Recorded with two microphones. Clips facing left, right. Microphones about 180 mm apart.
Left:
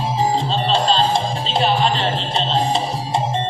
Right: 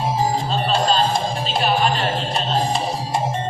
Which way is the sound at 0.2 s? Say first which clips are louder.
Left 2 dB; 25° left (ahead or behind).